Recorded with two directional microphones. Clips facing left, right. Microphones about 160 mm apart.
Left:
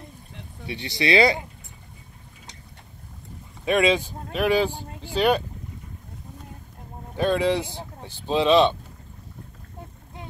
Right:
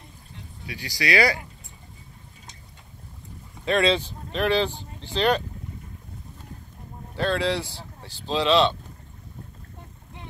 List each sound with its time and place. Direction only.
0.7 s speech: 25° left (ahead or behind)
3.6 s speech: 15° left (ahead or behind)
7.2 s speech: 15° left (ahead or behind)